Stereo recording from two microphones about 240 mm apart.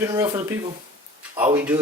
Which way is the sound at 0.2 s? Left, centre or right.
Centre.